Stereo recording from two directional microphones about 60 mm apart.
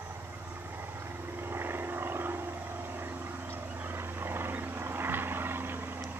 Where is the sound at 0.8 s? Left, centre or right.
Right.